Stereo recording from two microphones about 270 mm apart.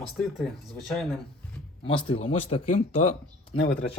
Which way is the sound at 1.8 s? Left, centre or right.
Centre.